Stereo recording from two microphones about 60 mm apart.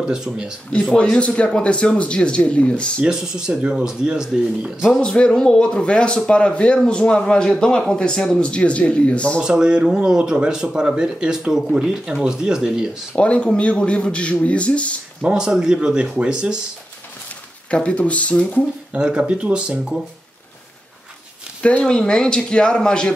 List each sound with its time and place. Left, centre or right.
0.2 s speech: centre
1.2 s speech: centre
3.1 s speech: centre
5.0 s speech: centre
9.4 s speech: centre
13.1 s speech: centre
15.3 s speech: centre
17.6 s speech: centre
18.9 s speech: centre
21.6 s speech: left
21.9 s speech: centre